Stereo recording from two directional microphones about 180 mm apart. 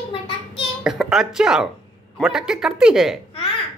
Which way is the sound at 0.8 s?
Centre (ahead or behind).